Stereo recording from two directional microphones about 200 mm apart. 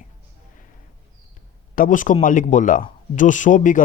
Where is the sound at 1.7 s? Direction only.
40° left (ahead or behind).